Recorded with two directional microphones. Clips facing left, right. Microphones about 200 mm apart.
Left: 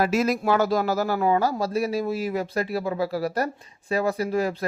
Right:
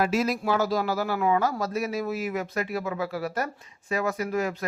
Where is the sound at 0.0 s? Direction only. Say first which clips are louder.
Left 3 dB; 45° left (ahead or behind).